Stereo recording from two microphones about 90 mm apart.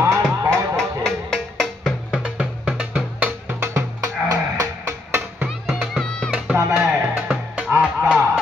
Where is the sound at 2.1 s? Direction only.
15° right (ahead or behind).